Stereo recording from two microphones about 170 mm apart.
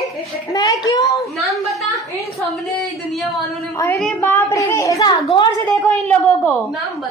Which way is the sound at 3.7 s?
15° left (ahead or behind).